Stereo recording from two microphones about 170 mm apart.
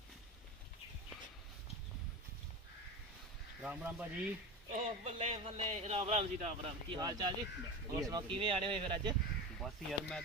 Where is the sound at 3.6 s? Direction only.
10° right (ahead or behind).